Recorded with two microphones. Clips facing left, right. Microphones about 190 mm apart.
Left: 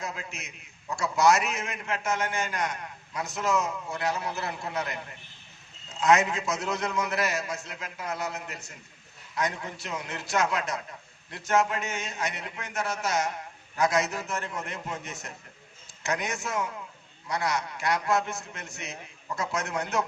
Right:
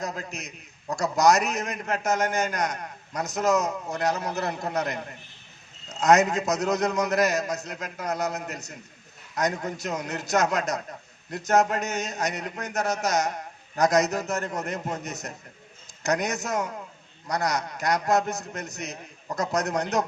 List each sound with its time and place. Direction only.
0.0 s a man's voice: 40° right (ahead or behind)